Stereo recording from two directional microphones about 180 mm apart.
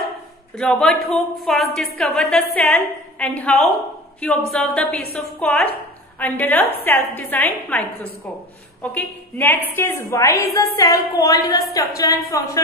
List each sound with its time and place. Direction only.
0.6 s a woman's voice: 5° left (ahead or behind)
8.8 s a woman's voice: 10° left (ahead or behind)